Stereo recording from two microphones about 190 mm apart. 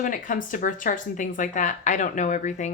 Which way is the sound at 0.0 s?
45° left (ahead or behind).